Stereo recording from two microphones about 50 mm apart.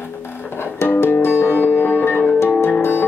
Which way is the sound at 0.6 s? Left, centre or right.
Left.